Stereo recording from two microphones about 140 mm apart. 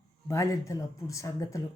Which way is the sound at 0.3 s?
20° left (ahead or behind).